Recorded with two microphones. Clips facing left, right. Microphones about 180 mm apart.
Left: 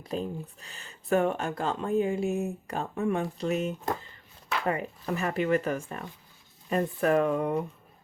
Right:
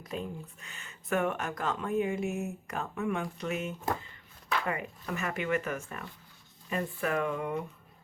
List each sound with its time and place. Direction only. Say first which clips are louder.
0.0 s speech: left 5 dB; 35° left (ahead or behind)